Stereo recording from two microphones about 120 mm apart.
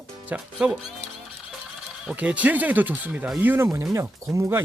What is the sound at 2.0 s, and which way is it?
Speech, 10° right (ahead or behind).